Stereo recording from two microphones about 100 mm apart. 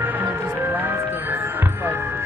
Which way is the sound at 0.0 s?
20° right (ahead or behind).